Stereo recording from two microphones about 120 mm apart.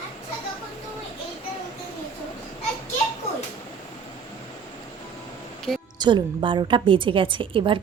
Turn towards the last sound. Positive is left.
turn(degrees=-45)  # may be behind; listen again after turning